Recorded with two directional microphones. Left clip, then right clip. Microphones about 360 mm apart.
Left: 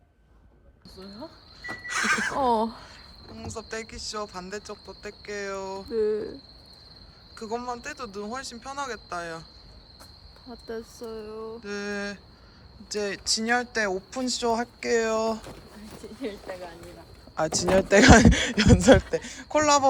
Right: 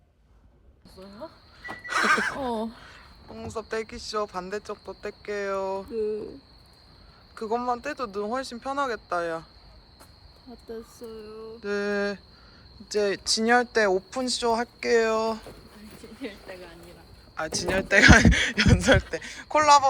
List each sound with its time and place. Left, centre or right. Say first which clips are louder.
1.9 s speech: right 3 dB; centre
7.3 s speech: right 5 dB; centre
10.7 s a sound: left 3 dB; centre
11.6 s speech: right 7 dB; centre
15.8 s a sound: left 3 dB; left
17.3 s speech: left 4 dB; centre